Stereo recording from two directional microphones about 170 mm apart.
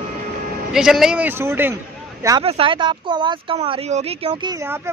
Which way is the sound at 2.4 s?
35° right (ahead or behind).